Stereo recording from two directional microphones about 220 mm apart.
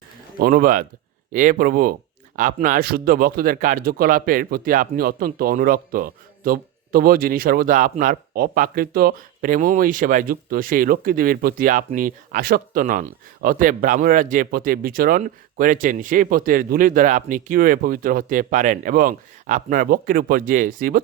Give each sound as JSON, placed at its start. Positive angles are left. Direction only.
{"t": 0.3, "sound": "speech", "side_deg": -40}